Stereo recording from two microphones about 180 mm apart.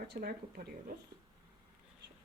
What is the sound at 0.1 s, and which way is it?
Speech, 60° right (ahead or behind).